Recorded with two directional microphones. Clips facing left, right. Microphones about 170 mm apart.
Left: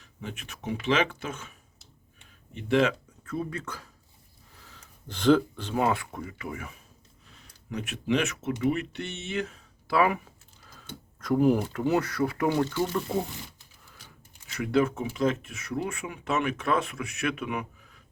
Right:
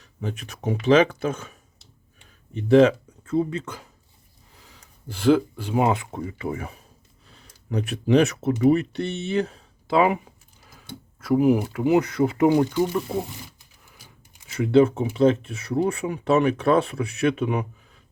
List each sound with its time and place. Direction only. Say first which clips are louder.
0.0 s speech: right 7 dB; 35° right (ahead or behind)
2.6 s speech: right 9 dB; 35° right (ahead or behind); by 3.8 s 20° right (ahead or behind)
4.6 s speech: right 5 dB; 5° right (ahead or behind); by 9.6 s 35° right (ahead or behind)
9.8 s speech: right 5 dB; 20° right (ahead or behind)
14.5 s speech: right 8 dB; 25° right (ahead or behind)